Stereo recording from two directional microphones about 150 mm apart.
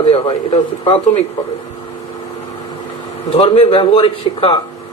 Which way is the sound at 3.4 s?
35° left (ahead or behind).